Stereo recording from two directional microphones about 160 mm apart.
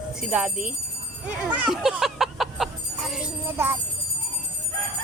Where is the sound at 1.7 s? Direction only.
Centre (ahead or behind).